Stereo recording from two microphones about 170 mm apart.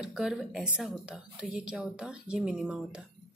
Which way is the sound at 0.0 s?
5° right (ahead or behind).